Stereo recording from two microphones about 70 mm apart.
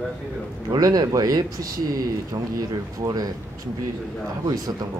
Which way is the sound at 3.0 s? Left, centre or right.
Right.